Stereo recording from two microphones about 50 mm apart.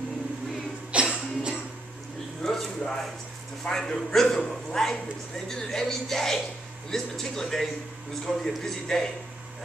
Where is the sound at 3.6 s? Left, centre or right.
Centre.